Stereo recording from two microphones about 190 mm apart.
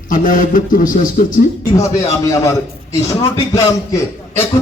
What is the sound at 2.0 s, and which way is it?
A man's voice, 15° left (ahead or behind).